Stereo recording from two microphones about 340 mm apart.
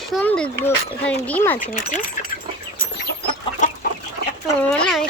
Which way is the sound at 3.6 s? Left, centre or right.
Left.